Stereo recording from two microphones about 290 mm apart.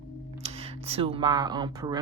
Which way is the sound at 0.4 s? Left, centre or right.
Centre.